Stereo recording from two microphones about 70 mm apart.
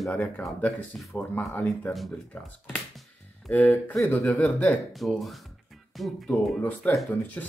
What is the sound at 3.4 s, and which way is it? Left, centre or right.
Speech, left.